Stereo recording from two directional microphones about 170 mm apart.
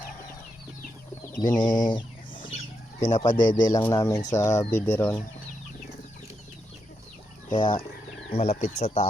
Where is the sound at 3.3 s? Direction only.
50° left (ahead or behind).